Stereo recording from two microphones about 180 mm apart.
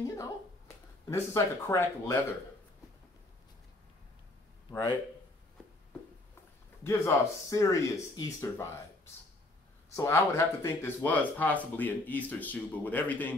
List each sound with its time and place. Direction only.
0.0 s a sound: 15° left (ahead or behind)
1.1 s speech: 15° left (ahead or behind)
4.6 s a man's voice: 25° left (ahead or behind)
6.8 s speech: 15° left (ahead or behind)
9.9 s speech: 15° left (ahead or behind)